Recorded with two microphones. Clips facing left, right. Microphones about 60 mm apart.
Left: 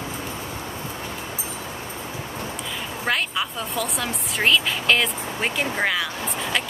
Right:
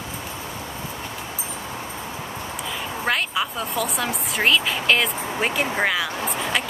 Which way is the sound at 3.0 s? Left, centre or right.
Centre.